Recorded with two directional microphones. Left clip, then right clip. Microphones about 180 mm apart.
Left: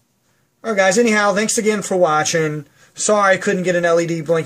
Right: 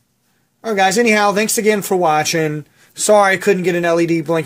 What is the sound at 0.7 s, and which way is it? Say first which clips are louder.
Speech: right 1 dB; 45° right (ahead or behind).